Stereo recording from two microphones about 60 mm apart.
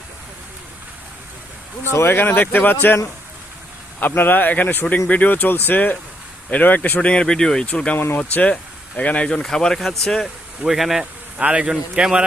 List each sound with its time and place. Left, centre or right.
1.8 s speech: left
4.0 s speech: left
7.0 s speech: centre
7.9 s speech: left
8.2 s speech: left
9.4 s speech: centre
11.3 s a man's voice: centre